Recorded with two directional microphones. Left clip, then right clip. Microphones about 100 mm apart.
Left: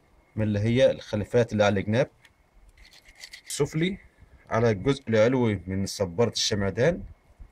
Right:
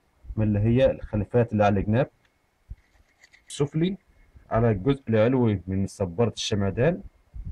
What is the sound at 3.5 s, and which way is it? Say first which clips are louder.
Speech: even; 15° left (ahead or behind).